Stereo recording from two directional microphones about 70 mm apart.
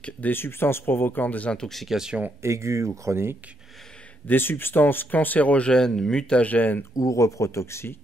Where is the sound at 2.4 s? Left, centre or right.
Right.